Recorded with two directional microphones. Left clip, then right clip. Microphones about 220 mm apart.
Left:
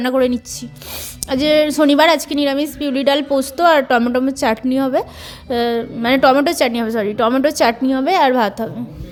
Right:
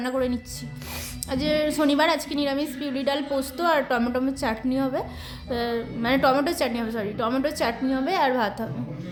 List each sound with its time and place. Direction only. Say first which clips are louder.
0.0 s a woman's voice: left 10 dB; 30° left (ahead or behind)